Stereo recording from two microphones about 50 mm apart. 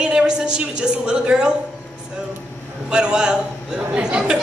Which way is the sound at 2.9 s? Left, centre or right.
Centre.